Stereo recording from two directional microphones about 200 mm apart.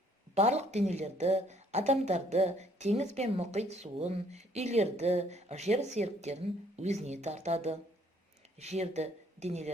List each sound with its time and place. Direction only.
0.3 s a woman's voice: 35° right (ahead or behind)